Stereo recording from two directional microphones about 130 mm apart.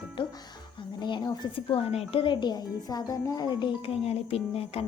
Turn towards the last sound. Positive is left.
turn(degrees=50)  # may be behind; listen again after turning